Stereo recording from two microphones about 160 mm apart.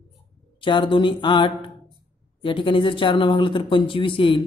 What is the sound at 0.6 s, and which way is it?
Speech, 30° left (ahead or behind).